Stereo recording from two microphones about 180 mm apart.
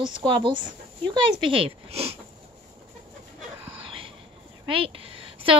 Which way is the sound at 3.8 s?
30° right (ahead or behind).